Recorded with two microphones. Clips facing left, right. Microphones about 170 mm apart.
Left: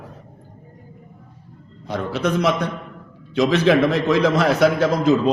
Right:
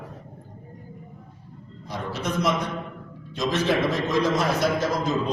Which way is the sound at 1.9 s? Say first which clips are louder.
Left 7 dB; 70° left (ahead or behind).